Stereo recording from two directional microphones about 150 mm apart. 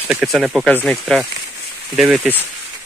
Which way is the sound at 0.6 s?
10° left (ahead or behind).